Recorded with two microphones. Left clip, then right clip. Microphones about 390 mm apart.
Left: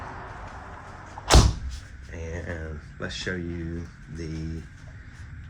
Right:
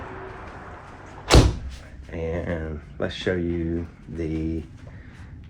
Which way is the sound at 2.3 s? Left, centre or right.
Right.